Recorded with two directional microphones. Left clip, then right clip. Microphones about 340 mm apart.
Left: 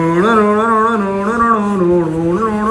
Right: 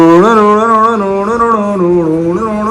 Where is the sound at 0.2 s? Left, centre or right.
Centre.